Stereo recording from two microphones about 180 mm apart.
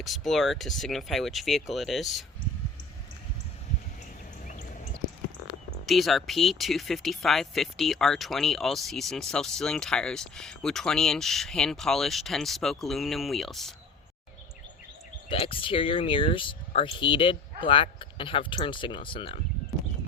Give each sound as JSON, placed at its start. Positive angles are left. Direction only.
{"t": 0.0, "sound": "speech", "side_deg": 0}
{"t": 5.8, "sound": "speech", "side_deg": 0}
{"t": 15.3, "sound": "speech", "side_deg": 30}